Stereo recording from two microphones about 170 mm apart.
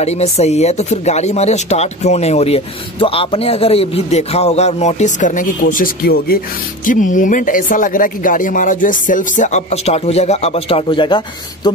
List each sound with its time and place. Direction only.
0.0 s speech: 40° left (ahead or behind); by 6.4 s 60° left (ahead or behind)
6.9 s speech: 50° left (ahead or behind); by 11.7 s 25° left (ahead or behind)